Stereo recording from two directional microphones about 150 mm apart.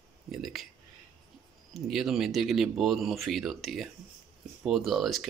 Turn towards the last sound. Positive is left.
turn(degrees=0)  # may be behind; listen again after turning